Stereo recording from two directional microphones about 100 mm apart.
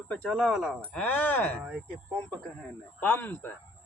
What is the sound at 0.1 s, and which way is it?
Speech, 5° left (ahead or behind).